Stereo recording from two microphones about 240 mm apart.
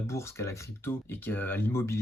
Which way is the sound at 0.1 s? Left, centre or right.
Centre.